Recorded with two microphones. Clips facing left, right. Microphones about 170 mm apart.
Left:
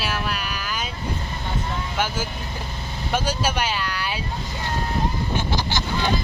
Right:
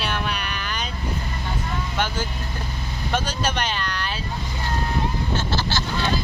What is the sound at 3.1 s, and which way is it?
Speech, 10° left (ahead or behind).